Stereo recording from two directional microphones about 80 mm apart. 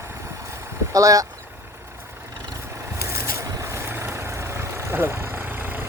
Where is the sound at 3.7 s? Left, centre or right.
Right.